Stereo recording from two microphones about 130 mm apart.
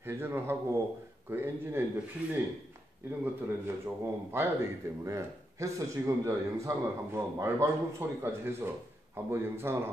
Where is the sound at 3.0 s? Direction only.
20° right (ahead or behind).